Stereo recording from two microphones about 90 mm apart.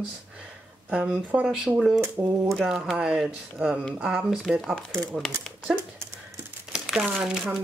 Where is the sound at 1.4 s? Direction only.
5° right (ahead or behind).